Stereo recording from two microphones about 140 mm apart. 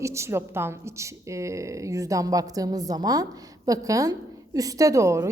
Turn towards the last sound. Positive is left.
turn(degrees=-20)  # may be behind; listen again after turning